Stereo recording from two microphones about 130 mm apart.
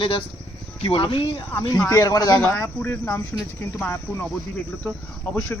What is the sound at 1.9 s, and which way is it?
Speech, 25° left (ahead or behind).